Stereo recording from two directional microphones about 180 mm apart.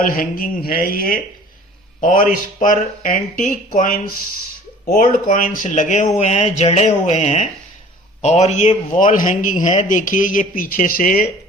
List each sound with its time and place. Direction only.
0.0 s a man's voice: 50° left (ahead or behind)
5.3 s a man's voice: 45° left (ahead or behind)